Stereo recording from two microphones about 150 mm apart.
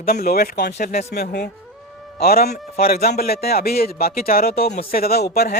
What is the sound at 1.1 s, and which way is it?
A man's voice, 90° left.